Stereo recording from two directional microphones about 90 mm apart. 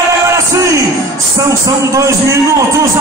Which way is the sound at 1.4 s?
35° right (ahead or behind).